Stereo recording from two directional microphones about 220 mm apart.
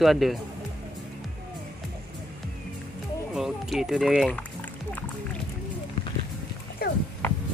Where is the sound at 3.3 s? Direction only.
Centre (ahead or behind).